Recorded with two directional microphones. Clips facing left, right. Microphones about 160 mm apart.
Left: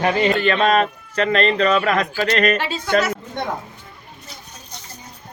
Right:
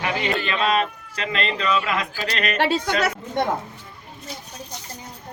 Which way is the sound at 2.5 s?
65° right (ahead or behind).